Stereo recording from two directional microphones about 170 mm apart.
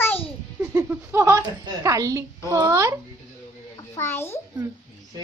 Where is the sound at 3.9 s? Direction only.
15° left (ahead or behind).